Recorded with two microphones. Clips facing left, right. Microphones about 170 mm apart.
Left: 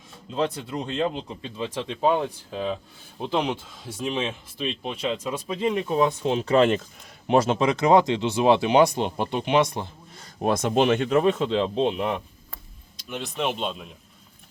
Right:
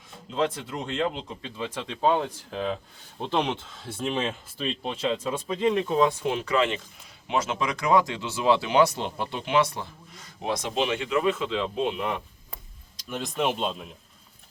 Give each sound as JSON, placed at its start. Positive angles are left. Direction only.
{"t": 0.9, "sound": "speech", "side_deg": 20}
{"t": 5.5, "sound": "speech", "side_deg": 20}
{"t": 6.6, "sound": "speech", "side_deg": 45}
{"t": 7.3, "sound": "speech", "side_deg": 30}
{"t": 10.4, "sound": "speech", "side_deg": 50}
{"t": 13.1, "sound": "speech", "side_deg": 0}